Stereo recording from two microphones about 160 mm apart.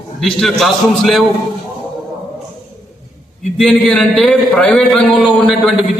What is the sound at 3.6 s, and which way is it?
A man's voice, 5° left (ahead or behind).